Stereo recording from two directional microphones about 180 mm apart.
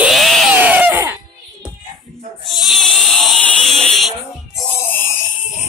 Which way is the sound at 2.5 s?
Centre (ahead or behind).